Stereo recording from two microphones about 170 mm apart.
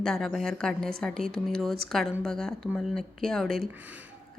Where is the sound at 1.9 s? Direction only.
Centre (ahead or behind).